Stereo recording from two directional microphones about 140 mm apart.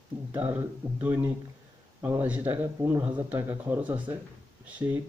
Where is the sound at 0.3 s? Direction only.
15° right (ahead or behind).